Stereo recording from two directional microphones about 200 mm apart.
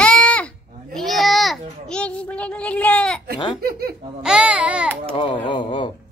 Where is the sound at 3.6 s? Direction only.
50° right (ahead or behind).